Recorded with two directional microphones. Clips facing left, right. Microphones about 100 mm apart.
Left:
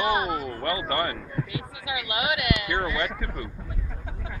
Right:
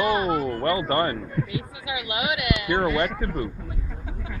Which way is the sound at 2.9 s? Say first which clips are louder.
Right 5 dB; 60° right (ahead or behind).